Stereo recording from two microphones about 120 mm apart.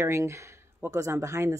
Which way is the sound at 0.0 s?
25° right (ahead or behind).